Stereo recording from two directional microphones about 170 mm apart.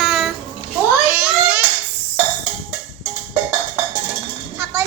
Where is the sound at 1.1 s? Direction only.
10° right (ahead or behind).